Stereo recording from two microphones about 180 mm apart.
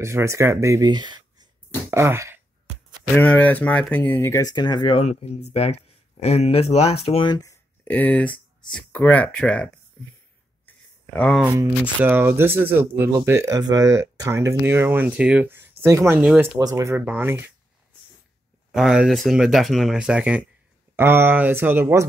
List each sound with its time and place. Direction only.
0.0 s speech: 15° right (ahead or behind)
1.9 s throat clearing: 15° right (ahead or behind)
3.2 s speech: 10° left (ahead or behind)
11.1 s speech: 5° left (ahead or behind)
11.4 s speech: 20° right (ahead or behind)
18.7 s speech: 5° right (ahead or behind)